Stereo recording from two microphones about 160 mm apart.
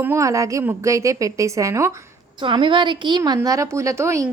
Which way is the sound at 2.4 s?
30° right (ahead or behind).